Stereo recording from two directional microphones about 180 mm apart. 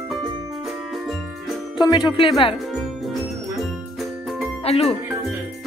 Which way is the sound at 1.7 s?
25° left (ahead or behind).